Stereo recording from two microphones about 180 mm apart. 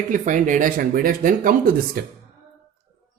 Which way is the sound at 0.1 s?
45° right (ahead or behind).